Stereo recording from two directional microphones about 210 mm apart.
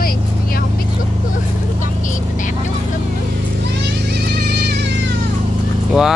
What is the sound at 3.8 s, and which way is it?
Music, 50° right (ahead or behind).